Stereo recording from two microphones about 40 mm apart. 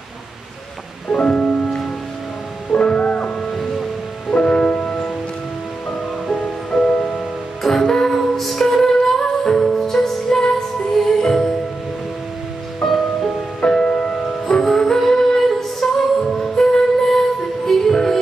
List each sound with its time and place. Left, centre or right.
1.1 s music: centre
1.4 s music: centre
3.5 s music: centre
4.4 s music: left
6.4 s music: centre
6.9 s music: left
7.2 s music: centre
12.8 s music: centre
13.7 s music: left